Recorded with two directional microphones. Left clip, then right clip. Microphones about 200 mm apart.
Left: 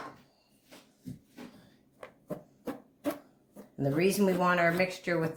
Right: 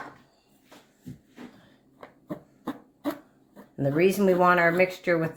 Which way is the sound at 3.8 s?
40° right (ahead or behind).